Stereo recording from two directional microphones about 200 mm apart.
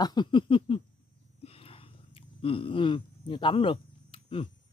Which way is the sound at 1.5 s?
30° left (ahead or behind).